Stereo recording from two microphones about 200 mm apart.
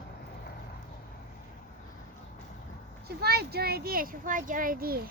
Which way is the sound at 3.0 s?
50° right (ahead or behind).